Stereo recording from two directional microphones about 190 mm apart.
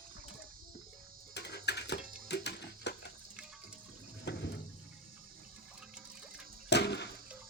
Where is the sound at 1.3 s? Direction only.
60° left (ahead or behind).